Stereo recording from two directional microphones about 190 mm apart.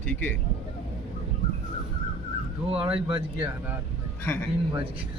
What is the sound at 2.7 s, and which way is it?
Speech, 30° right (ahead or behind).